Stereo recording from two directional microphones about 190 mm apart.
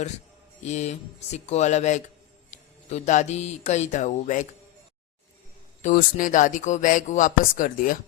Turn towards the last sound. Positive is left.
turn(degrees=45)  # may be behind; listen again after turning